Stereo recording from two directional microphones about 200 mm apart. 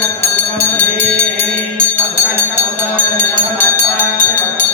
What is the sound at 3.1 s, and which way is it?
Music, 10° left (ahead or behind).